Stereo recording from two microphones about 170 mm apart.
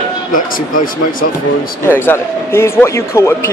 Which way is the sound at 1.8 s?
15° left (ahead or behind).